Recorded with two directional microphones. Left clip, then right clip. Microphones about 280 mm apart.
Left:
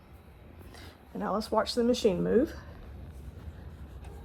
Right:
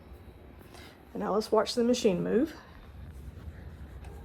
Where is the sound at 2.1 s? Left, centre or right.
Left.